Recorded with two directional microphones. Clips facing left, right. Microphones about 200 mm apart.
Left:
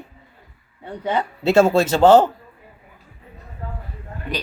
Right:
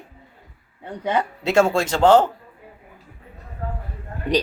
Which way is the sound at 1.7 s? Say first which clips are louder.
Left 3 dB; 5° left (ahead or behind).